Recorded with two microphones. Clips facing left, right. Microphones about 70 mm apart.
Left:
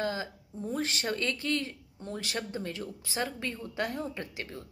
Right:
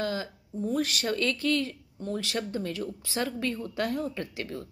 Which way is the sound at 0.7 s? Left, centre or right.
Left.